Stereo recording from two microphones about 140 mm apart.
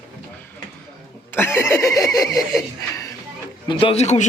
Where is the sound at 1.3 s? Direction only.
15° left (ahead or behind).